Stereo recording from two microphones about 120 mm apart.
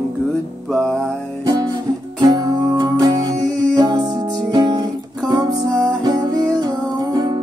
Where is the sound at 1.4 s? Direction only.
35° right (ahead or behind).